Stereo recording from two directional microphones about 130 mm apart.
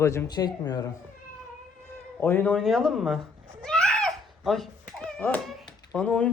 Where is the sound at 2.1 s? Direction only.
15° left (ahead or behind).